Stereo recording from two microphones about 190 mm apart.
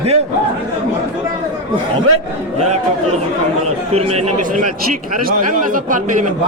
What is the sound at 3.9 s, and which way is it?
A man's voice, 35° right (ahead or behind).